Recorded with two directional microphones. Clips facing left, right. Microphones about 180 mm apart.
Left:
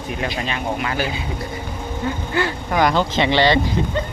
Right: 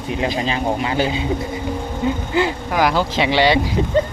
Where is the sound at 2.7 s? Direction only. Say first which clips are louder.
Left 4 dB; 5° right (ahead or behind).